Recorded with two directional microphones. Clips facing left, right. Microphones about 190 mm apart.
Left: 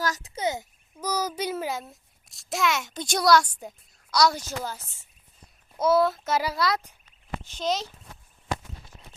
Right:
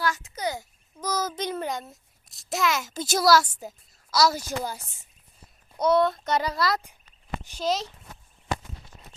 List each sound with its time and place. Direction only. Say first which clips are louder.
0.0 s a child's voice: right 1 dB; 35° left (ahead or behind)
0.4 s a child's voice: left 2 dB; 20° left (ahead or behind)
0.9 s a child's voice: even; 10° left (ahead or behind); by 5.0 s 15° right (ahead or behind)
5.7 s a child's voice: even; 5° left (ahead or behind)